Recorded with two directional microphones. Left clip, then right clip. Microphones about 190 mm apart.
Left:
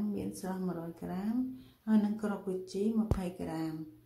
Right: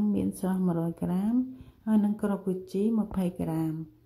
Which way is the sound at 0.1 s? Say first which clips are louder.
Right 8 dB; 45° right (ahead or behind).